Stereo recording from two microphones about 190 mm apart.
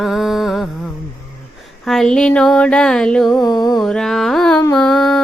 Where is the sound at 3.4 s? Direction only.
20° left (ahead or behind).